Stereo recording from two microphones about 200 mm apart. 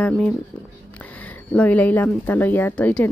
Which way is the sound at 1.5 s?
5° left (ahead or behind).